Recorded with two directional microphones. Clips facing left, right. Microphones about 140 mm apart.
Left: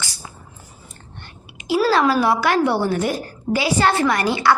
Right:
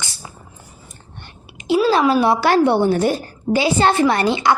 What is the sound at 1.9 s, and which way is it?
A woman's voice, 20° right (ahead or behind).